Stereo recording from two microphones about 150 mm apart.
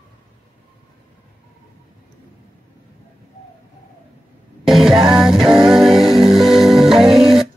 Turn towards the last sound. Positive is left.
turn(degrees=0)  # may be behind; listen again after turning